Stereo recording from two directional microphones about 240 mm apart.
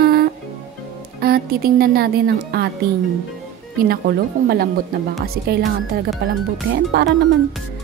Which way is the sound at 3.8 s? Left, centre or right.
Right.